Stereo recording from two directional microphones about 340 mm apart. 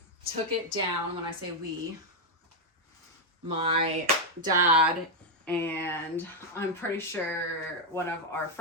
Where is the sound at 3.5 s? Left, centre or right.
Centre.